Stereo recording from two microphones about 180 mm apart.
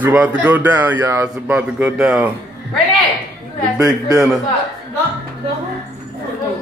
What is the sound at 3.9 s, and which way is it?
Speech, 20° right (ahead or behind).